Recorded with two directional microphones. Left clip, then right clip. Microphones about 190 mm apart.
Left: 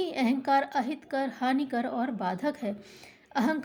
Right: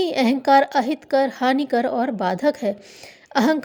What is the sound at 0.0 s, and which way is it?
A woman's voice, 45° right (ahead or behind).